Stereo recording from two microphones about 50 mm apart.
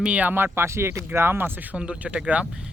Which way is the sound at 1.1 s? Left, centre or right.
Right.